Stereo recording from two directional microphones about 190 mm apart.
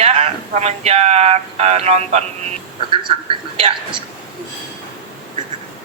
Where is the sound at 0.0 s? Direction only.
35° right (ahead or behind).